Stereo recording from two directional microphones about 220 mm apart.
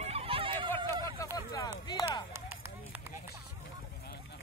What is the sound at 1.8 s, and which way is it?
Chop, 20° left (ahead or behind).